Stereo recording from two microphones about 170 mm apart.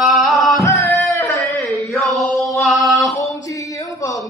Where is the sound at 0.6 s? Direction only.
20° left (ahead or behind).